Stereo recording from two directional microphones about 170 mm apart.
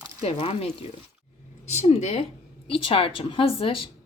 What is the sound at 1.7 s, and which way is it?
A woman's voice, 40° left (ahead or behind).